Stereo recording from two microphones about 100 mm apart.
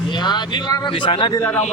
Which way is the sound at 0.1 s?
50° left (ahead or behind).